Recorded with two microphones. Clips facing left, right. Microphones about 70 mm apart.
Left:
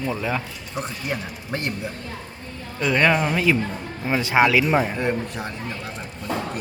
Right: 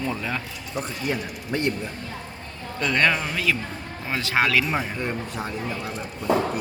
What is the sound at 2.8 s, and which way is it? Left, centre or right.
A man's voice, centre.